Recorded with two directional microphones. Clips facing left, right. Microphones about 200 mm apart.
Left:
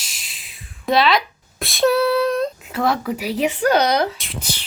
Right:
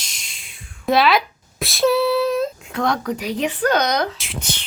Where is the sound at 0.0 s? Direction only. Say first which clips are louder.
Even; 5° left (ahead or behind).